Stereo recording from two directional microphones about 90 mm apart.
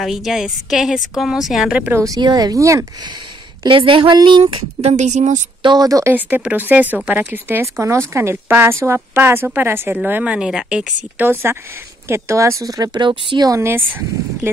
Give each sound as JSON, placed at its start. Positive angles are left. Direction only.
{"t": 0.0, "sound": "a woman's voice", "side_deg": -5}
{"t": 2.0, "sound": "speech", "side_deg": -45}
{"t": 3.6, "sound": "speech", "side_deg": -70}
{"t": 5.6, "sound": "speech", "side_deg": -55}
{"t": 5.9, "sound": "speech", "side_deg": -40}
{"t": 6.1, "sound": "a woman's voice", "side_deg": -20}
{"t": 7.6, "sound": "a woman's voice", "side_deg": -30}
{"t": 11.5, "sound": "a woman's voice", "side_deg": -25}
{"t": 13.0, "sound": "speech", "side_deg": -60}
{"t": 13.5, "sound": "a woman's voice", "side_deg": -25}